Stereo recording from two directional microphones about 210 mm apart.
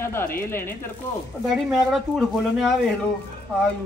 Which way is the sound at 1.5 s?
Centre (ahead or behind).